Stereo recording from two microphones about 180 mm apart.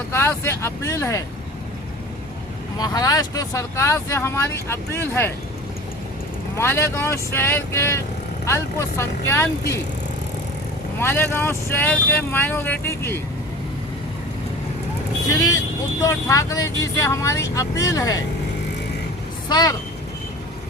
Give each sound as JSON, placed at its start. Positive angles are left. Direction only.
{"t": 0.1, "sound": "speech", "side_deg": 15}
{"t": 2.7, "sound": "speech", "side_deg": 20}
{"t": 6.6, "sound": "speech", "side_deg": 15}
{"t": 11.0, "sound": "speech", "side_deg": 10}
{"t": 15.3, "sound": "speech", "side_deg": 20}
{"t": 19.5, "sound": "speech", "side_deg": 25}